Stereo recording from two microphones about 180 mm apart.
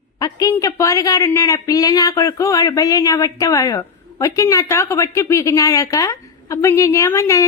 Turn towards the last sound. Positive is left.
turn(degrees=15)  # may be behind; listen again after turning